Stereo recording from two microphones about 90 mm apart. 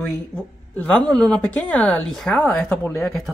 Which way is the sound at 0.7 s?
15° left (ahead or behind).